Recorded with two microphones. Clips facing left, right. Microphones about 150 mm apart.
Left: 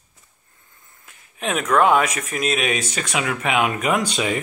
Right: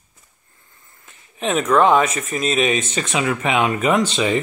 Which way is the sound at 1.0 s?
5° left (ahead or behind).